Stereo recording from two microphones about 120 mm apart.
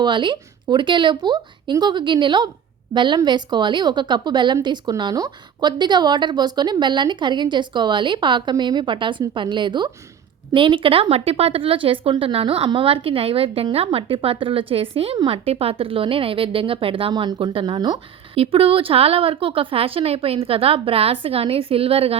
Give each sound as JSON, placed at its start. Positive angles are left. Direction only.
{"t": 0.0, "sound": "a woman's voice", "side_deg": -40}
{"t": 18.3, "sound": "speech", "side_deg": -50}